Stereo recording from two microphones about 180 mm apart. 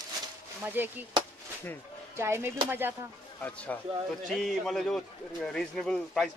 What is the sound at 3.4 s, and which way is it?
A man's voice, 10° left (ahead or behind).